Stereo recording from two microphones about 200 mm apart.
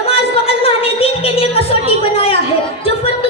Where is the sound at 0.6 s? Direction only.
30° left (ahead or behind).